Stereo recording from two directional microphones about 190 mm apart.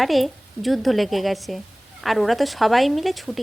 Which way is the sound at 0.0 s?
Centre (ahead or behind).